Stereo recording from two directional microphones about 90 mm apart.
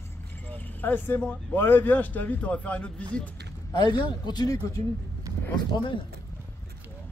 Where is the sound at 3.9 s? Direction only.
55° left (ahead or behind).